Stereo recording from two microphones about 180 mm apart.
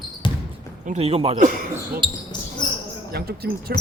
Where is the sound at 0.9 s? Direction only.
35° right (ahead or behind); by 2.0 s 50° right (ahead or behind).